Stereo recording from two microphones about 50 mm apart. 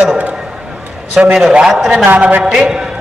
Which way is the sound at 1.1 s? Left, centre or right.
Centre.